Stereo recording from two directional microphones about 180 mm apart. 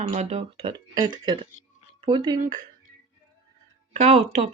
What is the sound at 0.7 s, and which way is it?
Speech, 25° right (ahead or behind).